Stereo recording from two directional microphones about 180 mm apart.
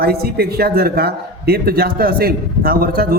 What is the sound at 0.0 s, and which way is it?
A man's voice, 60° right (ahead or behind).